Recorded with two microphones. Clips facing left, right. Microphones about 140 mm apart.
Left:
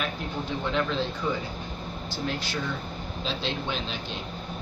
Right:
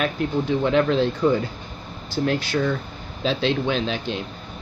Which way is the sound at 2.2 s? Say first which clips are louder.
Right 9 dB; 80° right.